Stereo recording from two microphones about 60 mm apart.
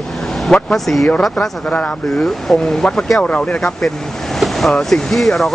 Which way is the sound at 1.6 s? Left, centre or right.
Left.